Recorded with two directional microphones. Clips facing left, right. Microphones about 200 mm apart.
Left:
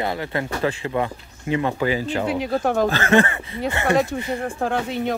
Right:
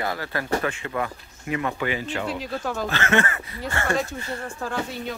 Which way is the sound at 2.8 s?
35° left (ahead or behind).